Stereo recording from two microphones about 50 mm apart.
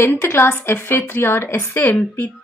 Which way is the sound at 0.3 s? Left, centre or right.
Left.